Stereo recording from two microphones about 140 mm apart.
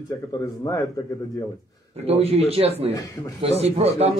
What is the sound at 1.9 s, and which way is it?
A man's voice, 45° right (ahead or behind).